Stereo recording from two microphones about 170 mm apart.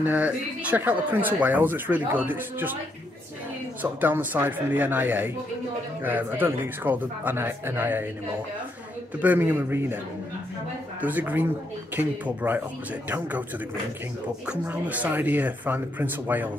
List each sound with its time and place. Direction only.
0.0 s speech: 10° right (ahead or behind)
3.8 s speech: 10° right (ahead or behind)
9.2 s speech: 10° right (ahead or behind)
11.0 s speech: 10° right (ahead or behind)
14.4 s speech: 5° right (ahead or behind)